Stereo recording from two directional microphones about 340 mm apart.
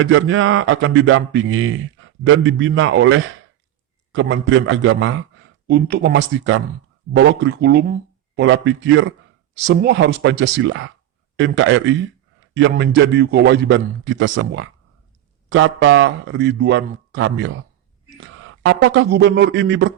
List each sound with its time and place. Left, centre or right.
0.0 s a man's voice: right